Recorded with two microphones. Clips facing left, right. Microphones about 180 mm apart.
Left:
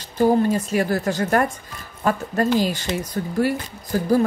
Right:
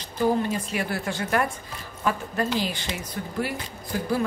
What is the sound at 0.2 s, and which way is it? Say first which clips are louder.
Speech: left 6 dB; 40° left (ahead or behind).